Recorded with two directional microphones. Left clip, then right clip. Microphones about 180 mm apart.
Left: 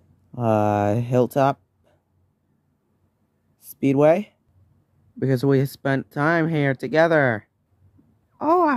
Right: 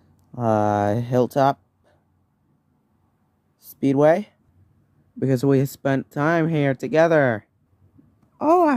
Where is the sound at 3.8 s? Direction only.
10° left (ahead or behind).